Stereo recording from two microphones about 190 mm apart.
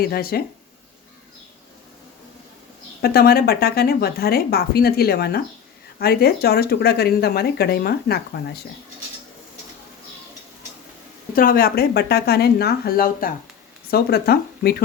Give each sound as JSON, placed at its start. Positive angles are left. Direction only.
{"t": 0.0, "sound": "speech", "side_deg": 55}
{"t": 3.0, "sound": "speech", "side_deg": 55}
{"t": 11.3, "sound": "speech", "side_deg": 50}